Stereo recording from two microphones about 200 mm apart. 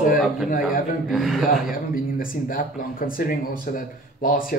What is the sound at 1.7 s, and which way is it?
Speech, 45° left (ahead or behind).